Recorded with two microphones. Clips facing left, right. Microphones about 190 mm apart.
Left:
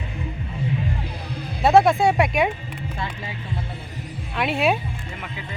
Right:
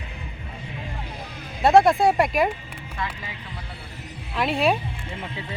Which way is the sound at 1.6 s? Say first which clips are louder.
Even; centre (ahead or behind).